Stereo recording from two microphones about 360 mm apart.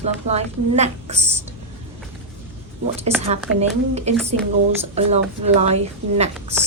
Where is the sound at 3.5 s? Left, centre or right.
Centre.